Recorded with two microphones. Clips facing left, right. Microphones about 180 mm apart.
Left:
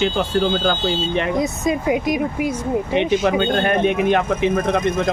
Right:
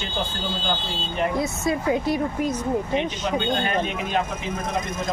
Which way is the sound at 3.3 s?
60° left (ahead or behind).